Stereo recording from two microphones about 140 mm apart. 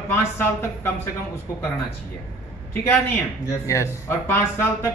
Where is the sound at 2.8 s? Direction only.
20° left (ahead or behind).